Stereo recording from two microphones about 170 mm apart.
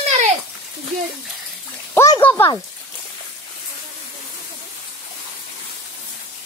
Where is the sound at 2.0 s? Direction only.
15° left (ahead or behind).